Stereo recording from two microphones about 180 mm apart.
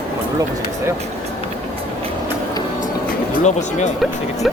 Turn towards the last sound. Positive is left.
turn(degrees=40)  # may be behind; listen again after turning